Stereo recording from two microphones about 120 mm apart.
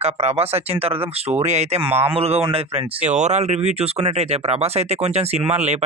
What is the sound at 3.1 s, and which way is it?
Speech, 75° right (ahead or behind).